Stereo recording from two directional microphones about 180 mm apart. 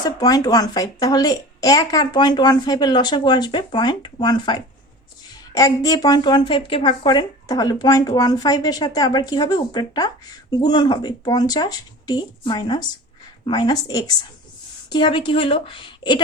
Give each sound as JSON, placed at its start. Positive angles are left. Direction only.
{"t": 0.0, "sound": "a woman's voice", "side_deg": 20}